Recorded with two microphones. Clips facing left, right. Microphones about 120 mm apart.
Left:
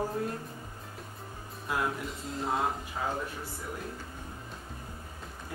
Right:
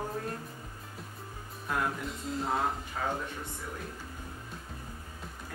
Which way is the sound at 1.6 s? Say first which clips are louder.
Left 1 dB; 5° left (ahead or behind).